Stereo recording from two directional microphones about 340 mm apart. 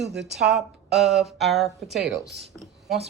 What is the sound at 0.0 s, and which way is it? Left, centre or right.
Speech, centre.